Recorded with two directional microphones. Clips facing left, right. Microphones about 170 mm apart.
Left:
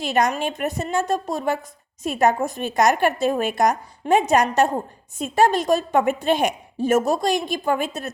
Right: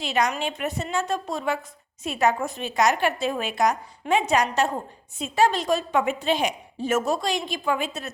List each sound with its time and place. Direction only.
0.0 s a woman's voice: 50° left (ahead or behind)